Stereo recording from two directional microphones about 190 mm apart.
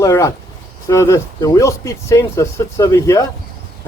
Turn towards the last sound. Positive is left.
turn(degrees=15)  # may be behind; listen again after turning